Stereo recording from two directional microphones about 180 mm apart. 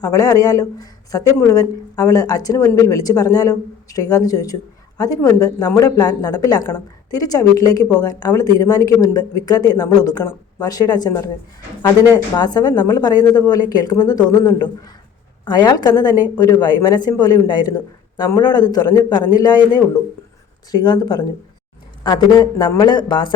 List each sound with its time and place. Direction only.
0.0 s speech: 20° left (ahead or behind)